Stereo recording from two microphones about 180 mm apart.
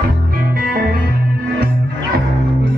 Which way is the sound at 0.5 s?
55° right (ahead or behind).